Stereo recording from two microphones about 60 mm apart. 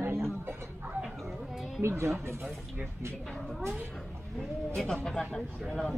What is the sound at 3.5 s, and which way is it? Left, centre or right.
Speech, centre.